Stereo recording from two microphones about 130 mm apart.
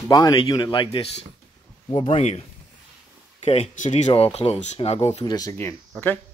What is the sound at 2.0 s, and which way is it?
Speech, 50° left (ahead or behind).